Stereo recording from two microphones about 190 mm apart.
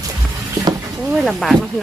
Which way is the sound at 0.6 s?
20° right (ahead or behind).